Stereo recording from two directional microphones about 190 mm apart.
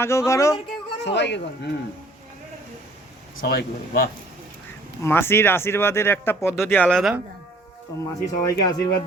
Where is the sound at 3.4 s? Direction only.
50° left (ahead or behind).